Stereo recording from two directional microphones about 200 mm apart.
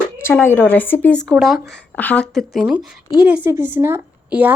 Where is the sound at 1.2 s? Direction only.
5° right (ahead or behind).